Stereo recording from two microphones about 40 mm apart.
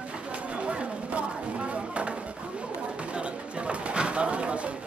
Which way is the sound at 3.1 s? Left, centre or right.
Right.